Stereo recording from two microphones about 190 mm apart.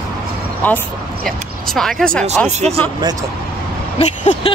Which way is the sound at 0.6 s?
10° left (ahead or behind).